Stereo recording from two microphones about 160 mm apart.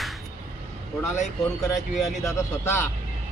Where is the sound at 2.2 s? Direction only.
15° left (ahead or behind).